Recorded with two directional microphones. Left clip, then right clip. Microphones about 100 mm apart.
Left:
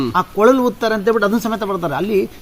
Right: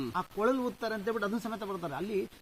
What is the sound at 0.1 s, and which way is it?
Speech, 15° left (ahead or behind).